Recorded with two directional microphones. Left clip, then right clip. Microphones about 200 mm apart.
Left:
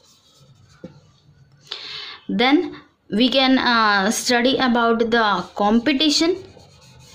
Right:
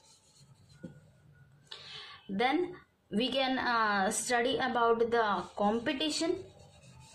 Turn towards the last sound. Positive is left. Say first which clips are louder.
# left 15 dB
turn(degrees=45)  # may be behind; listen again after turning